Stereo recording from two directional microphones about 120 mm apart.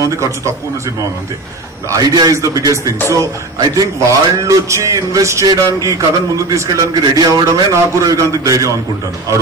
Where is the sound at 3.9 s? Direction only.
25° right (ahead or behind).